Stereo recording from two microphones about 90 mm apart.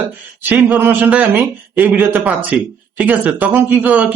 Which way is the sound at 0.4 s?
20° right (ahead or behind).